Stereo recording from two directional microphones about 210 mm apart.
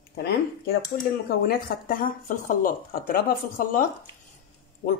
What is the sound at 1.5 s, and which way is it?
Speech, 40° left (ahead or behind).